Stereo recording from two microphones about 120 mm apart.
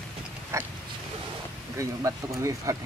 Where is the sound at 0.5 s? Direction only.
25° right (ahead or behind).